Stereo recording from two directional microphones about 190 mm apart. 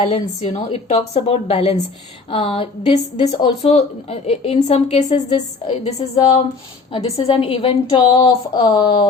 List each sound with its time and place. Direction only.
0.0 s a woman's voice: 35° left (ahead or behind)